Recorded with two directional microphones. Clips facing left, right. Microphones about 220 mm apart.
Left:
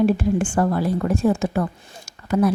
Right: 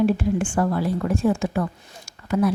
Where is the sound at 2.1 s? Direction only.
40° left (ahead or behind).